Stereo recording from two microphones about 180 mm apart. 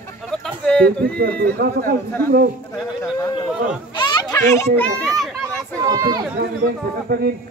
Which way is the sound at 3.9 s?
25° left (ahead or behind).